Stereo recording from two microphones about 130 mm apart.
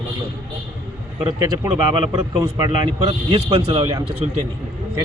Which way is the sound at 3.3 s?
50° right (ahead or behind).